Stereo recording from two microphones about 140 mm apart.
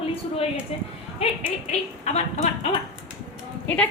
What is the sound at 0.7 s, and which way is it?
Speech, 45° left (ahead or behind).